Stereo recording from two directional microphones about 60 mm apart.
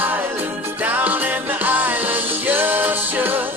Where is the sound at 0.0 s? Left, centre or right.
Right.